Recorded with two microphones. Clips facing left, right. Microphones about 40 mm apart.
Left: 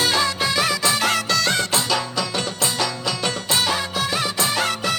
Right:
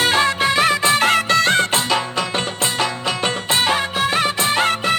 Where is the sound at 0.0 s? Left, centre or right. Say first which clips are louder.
Right 4 dB; right.